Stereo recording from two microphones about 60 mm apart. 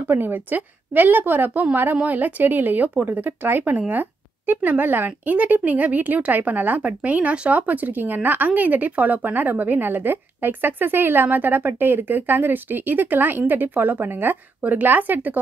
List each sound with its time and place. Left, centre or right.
0.1 s a woman's voice: right
3.9 s a sound: right
4.6 s a woman's voice: right